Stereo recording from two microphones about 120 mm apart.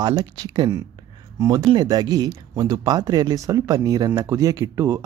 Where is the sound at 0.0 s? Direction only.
35° right (ahead or behind).